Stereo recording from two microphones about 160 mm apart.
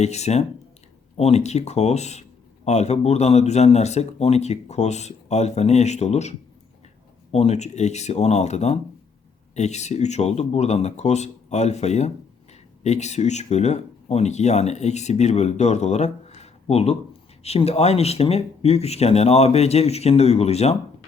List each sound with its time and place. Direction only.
0.0 s speech: 45° left (ahead or behind)
7.3 s speech: 45° left (ahead or behind)